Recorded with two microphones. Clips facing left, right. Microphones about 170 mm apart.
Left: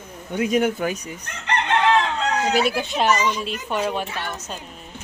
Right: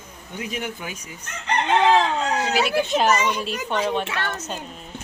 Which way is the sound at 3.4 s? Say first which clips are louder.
Even; 5° left (ahead or behind).